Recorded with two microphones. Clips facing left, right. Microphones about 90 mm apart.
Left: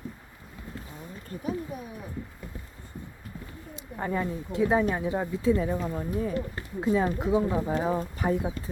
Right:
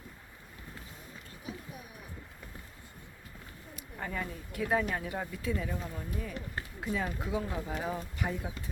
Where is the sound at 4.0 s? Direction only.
30° left (ahead or behind).